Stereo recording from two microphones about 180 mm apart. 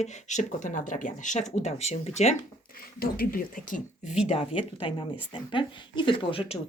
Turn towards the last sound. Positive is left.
turn(degrees=30)  # may be behind; listen again after turning